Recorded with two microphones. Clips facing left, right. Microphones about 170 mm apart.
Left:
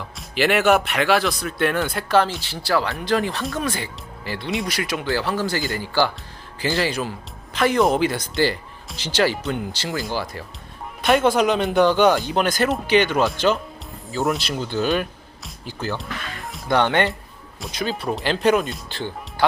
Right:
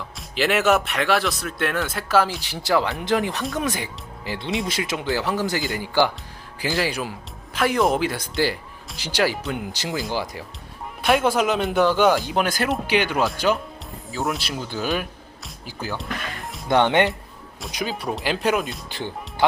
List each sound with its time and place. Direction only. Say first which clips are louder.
0.2 s speech: left 2 dB; centre (ahead or behind)
2.4 s speech: right 1 dB; 20° right (ahead or behind)
9.7 s speech: even; 15° right (ahead or behind); by 16.6 s centre (ahead or behind)
16.6 s speech: right 1 dB; 20° right (ahead or behind); by 18.8 s 5° right (ahead or behind)
18.9 s speech: left 1 dB; 15° right (ahead or behind)